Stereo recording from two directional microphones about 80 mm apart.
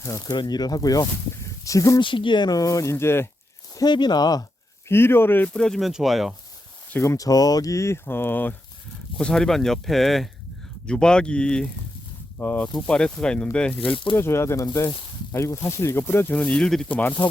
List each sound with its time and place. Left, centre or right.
0.0 s speech: left
0.3 s speech: left
2.0 s speech: left
2.5 s speech: left
3.8 s speech: left
4.9 s speech: left
5.5 s speech: centre
7.0 s speech: left
7.3 s speech: left
9.2 s speech: centre
13.9 s speech: left
14.2 s speech: left